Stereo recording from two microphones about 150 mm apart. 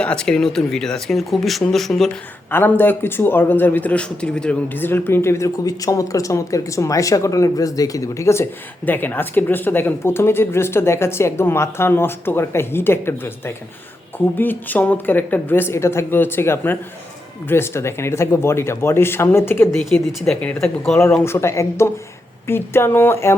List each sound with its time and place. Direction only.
0.0 s speech: 5° left (ahead or behind)
2.5 s speech: 15° left (ahead or behind)
21.2 s speech: 20° left (ahead or behind)